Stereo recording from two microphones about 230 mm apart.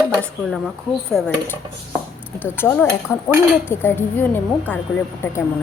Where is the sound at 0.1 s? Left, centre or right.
Centre.